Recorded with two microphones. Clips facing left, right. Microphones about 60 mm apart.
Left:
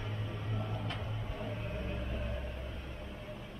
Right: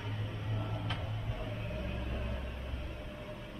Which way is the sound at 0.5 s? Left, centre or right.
Centre.